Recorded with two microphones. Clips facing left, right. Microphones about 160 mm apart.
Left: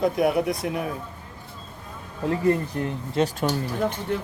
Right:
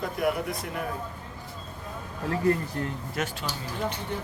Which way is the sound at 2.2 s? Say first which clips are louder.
Left 3 dB; 20° left (ahead or behind).